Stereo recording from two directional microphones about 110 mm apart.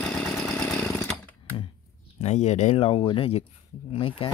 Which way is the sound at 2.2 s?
90° left.